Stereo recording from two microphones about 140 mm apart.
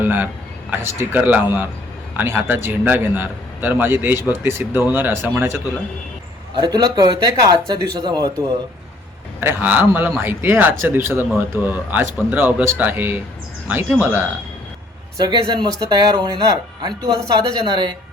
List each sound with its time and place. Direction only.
0.0 s a man's voice: 15° right (ahead or behind)
6.6 s speech: 30° right (ahead or behind)
9.4 s a man's voice: 15° right (ahead or behind)
15.2 s speech: 30° right (ahead or behind)